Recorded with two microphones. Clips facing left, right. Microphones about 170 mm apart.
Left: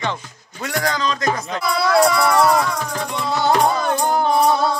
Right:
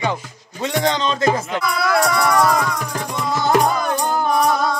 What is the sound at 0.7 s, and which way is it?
Speech, 25° right (ahead or behind).